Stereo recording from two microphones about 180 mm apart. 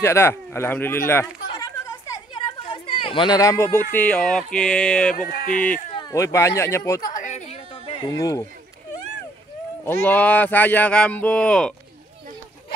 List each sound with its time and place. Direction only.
0.0 s a sound: 15° left (ahead or behind)
3.9 s speech: 5° left (ahead or behind)
5.1 s speech: 50° left (ahead or behind)
5.9 s speech: 20° left (ahead or behind)
7.0 s a sound: 45° left (ahead or behind)
8.0 s speech: 20° left (ahead or behind)
10.0 s speech: 10° left (ahead or behind)